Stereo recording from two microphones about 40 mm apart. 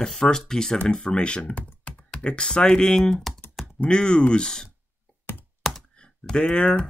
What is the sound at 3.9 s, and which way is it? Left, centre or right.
Speech, left.